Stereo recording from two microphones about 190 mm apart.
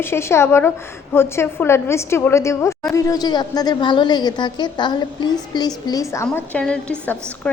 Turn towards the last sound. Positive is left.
turn(degrees=5)  # may be behind; listen again after turning